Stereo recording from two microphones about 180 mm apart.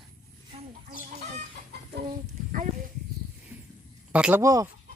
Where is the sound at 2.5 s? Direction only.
45° right (ahead or behind).